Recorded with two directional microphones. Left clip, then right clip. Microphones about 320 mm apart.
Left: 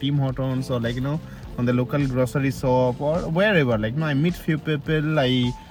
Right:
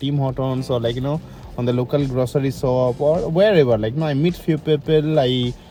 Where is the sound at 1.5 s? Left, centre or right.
Right.